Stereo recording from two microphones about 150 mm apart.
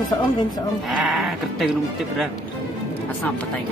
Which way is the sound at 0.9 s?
Centre (ahead or behind).